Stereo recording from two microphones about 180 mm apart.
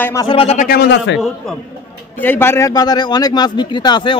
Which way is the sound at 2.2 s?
10° left (ahead or behind).